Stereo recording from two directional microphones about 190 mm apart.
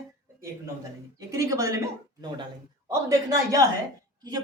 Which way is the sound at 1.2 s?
15° right (ahead or behind).